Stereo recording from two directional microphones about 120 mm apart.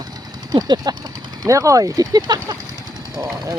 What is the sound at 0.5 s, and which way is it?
Speech, 35° right (ahead or behind).